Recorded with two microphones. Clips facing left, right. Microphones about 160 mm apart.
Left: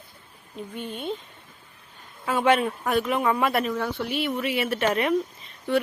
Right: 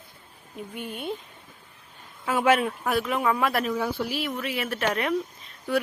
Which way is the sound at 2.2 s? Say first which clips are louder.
Left 1 dB; 5° right (ahead or behind).